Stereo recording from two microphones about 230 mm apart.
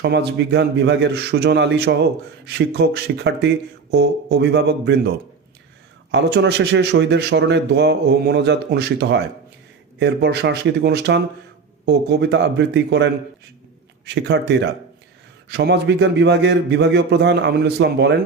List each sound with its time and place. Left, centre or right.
0.0 s speech: right
6.1 s speech: right